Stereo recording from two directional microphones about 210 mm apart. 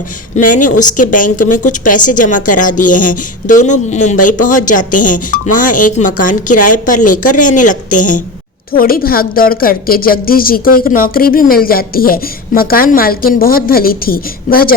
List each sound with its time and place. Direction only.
0.4 s a woman's voice: 35° left (ahead or behind)